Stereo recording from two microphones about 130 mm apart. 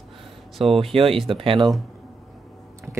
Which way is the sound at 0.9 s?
50° right (ahead or behind).